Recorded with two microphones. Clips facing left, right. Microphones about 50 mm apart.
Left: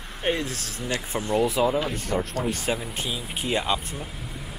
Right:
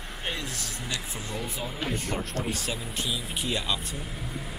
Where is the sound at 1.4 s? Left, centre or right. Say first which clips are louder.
Left 13 dB; left.